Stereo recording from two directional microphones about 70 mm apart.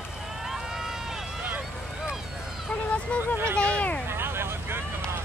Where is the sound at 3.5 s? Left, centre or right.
Centre.